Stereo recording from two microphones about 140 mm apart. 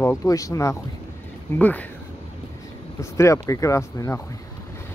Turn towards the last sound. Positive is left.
turn(degrees=20)  # may be behind; listen again after turning